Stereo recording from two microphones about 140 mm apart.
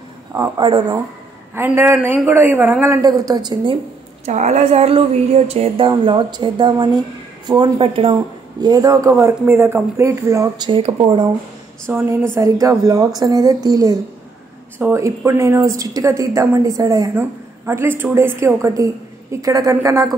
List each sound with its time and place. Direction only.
0.6 s speech: 35° right (ahead or behind)
1.5 s a man's voice: 15° right (ahead or behind)
4.3 s speech: 55° right (ahead or behind)
5.9 s speech: 35° right (ahead or behind)
10.7 s speech: 35° right (ahead or behind)
11.9 s a man's voice: 20° right (ahead or behind)